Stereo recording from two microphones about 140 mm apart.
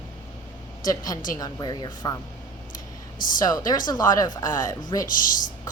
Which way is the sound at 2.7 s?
75° left (ahead or behind).